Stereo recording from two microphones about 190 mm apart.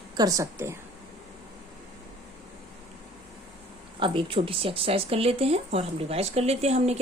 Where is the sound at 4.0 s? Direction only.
25° right (ahead or behind).